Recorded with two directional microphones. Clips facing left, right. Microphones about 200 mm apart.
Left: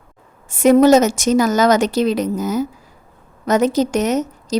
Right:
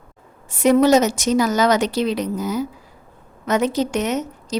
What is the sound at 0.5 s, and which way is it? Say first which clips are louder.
Speech: left 4 dB; 50° left (ahead or behind).